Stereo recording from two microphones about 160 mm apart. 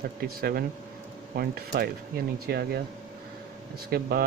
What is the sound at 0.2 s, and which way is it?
Speech, 75° right (ahead or behind).